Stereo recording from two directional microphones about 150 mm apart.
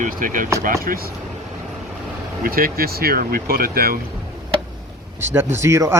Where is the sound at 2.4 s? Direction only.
80° right.